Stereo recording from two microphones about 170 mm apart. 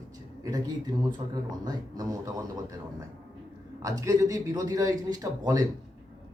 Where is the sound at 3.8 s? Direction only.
20° right (ahead or behind).